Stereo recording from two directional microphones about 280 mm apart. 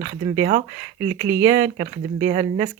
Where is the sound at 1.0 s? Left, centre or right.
Centre.